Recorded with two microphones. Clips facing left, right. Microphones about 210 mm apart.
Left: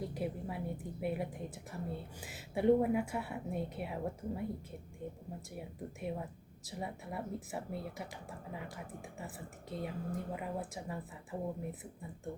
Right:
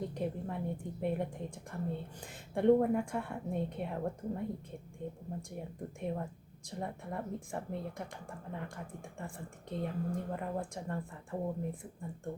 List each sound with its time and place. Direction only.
0.0 s speech: 5° left (ahead or behind)